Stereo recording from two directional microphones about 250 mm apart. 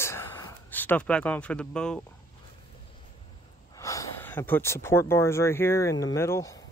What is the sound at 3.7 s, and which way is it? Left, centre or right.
Speech, centre.